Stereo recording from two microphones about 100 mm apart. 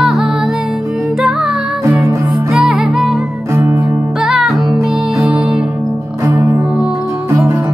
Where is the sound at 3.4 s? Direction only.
25° right (ahead or behind).